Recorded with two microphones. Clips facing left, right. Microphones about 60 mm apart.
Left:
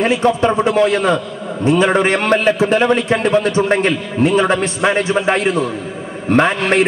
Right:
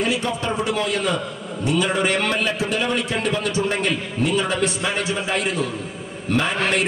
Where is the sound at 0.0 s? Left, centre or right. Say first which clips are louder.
Left 9 dB; left.